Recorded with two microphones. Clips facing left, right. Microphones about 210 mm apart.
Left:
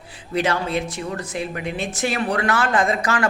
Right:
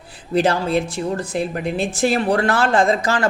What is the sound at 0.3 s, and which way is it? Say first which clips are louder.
Speech: right 4 dB; 35° right (ahead or behind).